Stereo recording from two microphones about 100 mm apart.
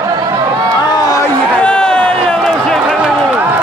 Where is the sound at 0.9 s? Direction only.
40° left (ahead or behind).